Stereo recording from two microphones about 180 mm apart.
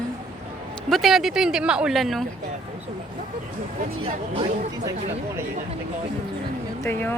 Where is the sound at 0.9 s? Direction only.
Centre (ahead or behind).